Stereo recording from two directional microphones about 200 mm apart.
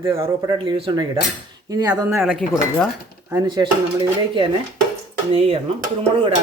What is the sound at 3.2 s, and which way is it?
Speech, 15° right (ahead or behind).